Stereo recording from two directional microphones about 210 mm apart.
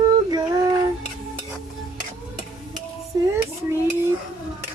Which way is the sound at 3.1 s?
20° right (ahead or behind).